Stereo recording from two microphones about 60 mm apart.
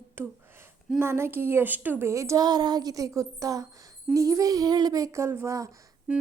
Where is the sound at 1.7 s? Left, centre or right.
Right.